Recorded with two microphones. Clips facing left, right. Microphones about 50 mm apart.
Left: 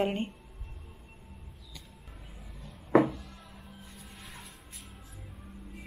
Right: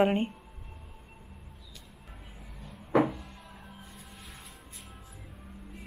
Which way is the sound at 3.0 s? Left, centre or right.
Centre.